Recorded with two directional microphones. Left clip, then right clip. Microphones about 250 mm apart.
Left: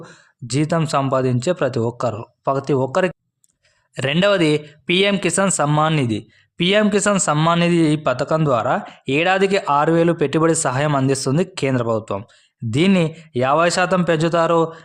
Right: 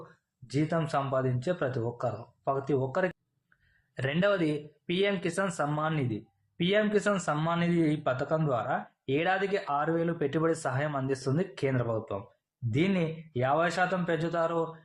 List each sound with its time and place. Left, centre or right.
0.4 s speech: left